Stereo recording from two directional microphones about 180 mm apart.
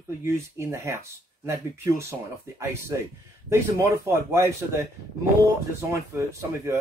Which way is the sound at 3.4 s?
15° right (ahead or behind).